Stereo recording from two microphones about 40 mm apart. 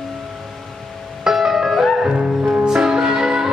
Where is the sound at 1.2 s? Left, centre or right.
Centre.